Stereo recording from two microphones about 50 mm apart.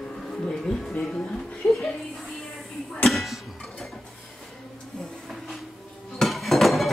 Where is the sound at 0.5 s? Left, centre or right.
Centre.